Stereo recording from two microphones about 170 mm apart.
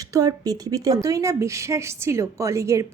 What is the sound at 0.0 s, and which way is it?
A woman's voice, 20° right (ahead or behind).